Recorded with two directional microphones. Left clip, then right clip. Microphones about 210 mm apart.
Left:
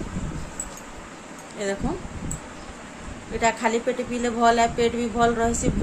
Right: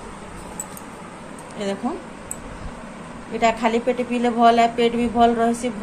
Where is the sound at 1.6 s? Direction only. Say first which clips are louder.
Right 1 dB; 25° left (ahead or behind).